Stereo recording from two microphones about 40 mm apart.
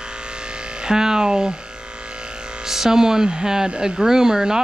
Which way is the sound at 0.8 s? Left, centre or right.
Centre.